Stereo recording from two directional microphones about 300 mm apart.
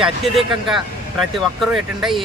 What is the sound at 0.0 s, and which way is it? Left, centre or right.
Speech, centre.